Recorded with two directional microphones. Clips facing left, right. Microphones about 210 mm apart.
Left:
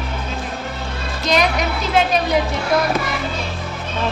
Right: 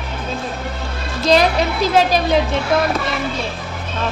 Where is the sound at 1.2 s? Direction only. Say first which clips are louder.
Right 4 dB; 30° right (ahead or behind).